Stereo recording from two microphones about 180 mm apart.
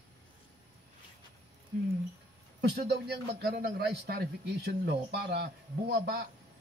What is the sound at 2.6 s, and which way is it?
A man's voice, 70° right (ahead or behind).